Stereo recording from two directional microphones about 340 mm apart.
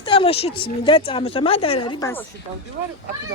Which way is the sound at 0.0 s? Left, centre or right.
Centre.